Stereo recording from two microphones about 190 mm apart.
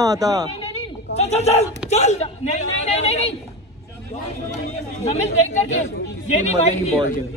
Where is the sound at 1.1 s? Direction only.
35° left (ahead or behind).